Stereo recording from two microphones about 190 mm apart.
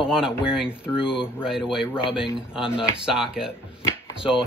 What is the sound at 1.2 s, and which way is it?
Speech, 5° right (ahead or behind).